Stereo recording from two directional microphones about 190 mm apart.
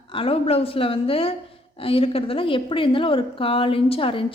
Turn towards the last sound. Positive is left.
turn(degrees=30)  # may be behind; listen again after turning